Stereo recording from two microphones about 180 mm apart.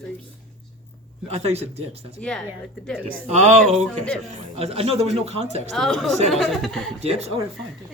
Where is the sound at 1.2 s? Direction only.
35° right (ahead or behind).